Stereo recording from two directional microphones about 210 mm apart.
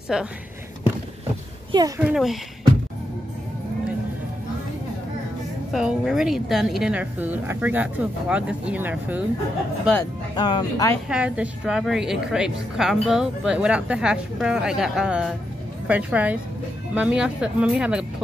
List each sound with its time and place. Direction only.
0.1 s a woman's voice: 5° right (ahead or behind)
1.7 s a child's voice: 20° right (ahead or behind)
2.0 s a woman's voice: 5° right (ahead or behind)
5.7 s a woman's voice: centre (ahead or behind)
10.3 s speech: 20° left (ahead or behind)
11.1 s a woman's voice: 5° right (ahead or behind)